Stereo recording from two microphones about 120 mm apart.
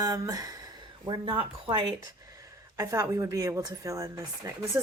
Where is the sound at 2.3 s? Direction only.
30° right (ahead or behind).